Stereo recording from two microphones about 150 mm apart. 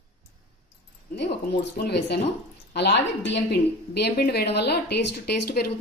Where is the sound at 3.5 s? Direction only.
90° left.